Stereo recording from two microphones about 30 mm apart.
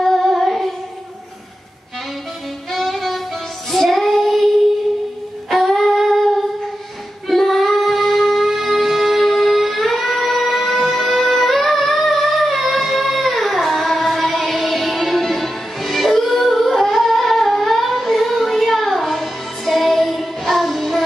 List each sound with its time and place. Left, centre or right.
0.0 s child singing: centre
0.3 s child singing: centre
2.7 s music: centre
3.7 s child singing: centre
5.5 s humming: centre
7.2 s music: centre